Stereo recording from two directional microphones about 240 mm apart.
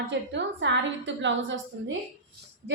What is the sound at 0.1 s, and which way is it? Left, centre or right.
A woman's voice, right.